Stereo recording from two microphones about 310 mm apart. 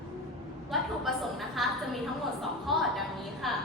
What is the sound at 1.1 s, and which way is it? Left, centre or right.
Speech, centre.